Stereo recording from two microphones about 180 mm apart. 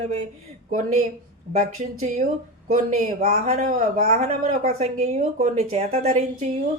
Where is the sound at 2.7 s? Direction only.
45° right (ahead or behind).